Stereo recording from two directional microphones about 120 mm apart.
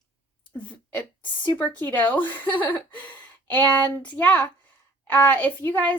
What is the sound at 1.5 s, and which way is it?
Speech, 15° left (ahead or behind).